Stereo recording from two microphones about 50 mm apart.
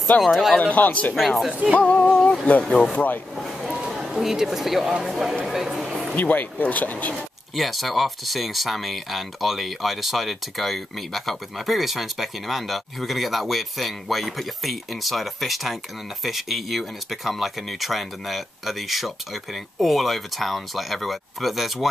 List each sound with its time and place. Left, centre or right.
0.2 s speech: centre
0.6 s speech: left
1.1 s speech: centre
1.5 s speech: right
1.8 s music: left
2.9 s speech: left
3.7 s a sound: centre
4.0 s speech: centre
6.1 s speech: left
7.5 s speech: centre